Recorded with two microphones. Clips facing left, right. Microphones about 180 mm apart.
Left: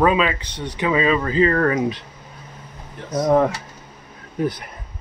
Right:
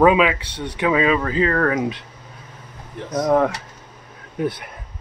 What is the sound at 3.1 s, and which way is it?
Speech, 5° left (ahead or behind).